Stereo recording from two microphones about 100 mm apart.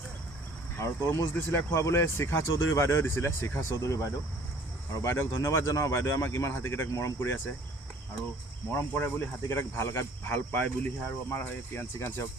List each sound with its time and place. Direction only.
0.8 s speech: 25° left (ahead or behind)
8.7 s speech: 25° left (ahead or behind)